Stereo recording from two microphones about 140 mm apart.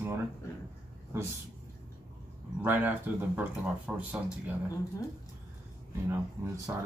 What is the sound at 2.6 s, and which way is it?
Speech, 15° right (ahead or behind).